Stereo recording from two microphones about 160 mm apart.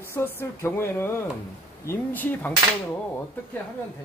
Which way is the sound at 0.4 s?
15° left (ahead or behind).